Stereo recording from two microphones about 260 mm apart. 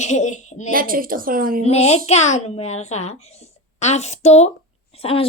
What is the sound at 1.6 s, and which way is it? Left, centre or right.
A child's voice, left.